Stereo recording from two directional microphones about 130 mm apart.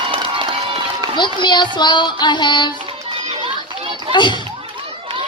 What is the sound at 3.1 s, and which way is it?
Children playing, 45° right (ahead or behind).